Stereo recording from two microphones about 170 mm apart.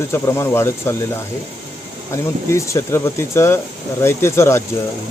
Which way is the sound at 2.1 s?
15° left (ahead or behind).